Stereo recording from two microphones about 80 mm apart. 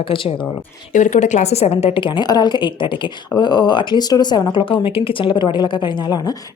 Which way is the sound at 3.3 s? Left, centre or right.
Left.